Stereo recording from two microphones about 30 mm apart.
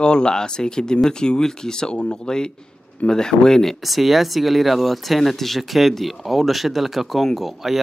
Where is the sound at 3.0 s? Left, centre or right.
Left.